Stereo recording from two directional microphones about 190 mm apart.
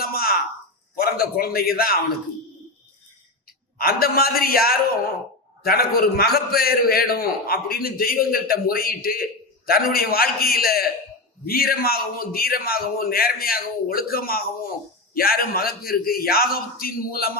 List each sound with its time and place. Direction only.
0.0 s a sound: 50° left (ahead or behind)
0.9 s a man's voice: 50° left (ahead or behind)
3.8 s a man's voice: 50° left (ahead or behind)